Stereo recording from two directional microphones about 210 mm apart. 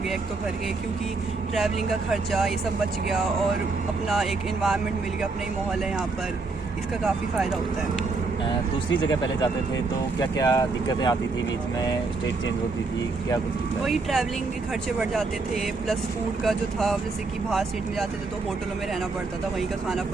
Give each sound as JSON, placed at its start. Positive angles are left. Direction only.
{"t": 1.5, "sound": "speech", "side_deg": 0}
{"t": 4.1, "sound": "speech", "side_deg": 0}
{"t": 7.0, "sound": "speech", "side_deg": -5}
{"t": 8.4, "sound": "speech", "side_deg": 20}
{"t": 13.8, "sound": "speech", "side_deg": 0}